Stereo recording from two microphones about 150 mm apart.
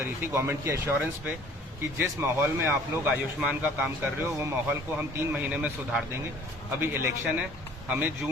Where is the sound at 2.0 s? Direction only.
15° right (ahead or behind).